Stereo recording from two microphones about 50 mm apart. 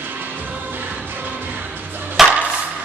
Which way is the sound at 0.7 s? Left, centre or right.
Right.